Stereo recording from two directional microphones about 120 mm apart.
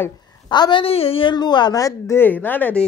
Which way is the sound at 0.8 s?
55° left (ahead or behind).